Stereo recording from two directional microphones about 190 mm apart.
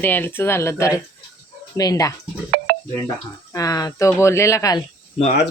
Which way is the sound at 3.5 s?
20° left (ahead or behind).